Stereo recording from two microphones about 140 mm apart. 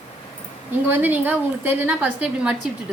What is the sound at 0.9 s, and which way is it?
A woman's voice, 10° right (ahead or behind).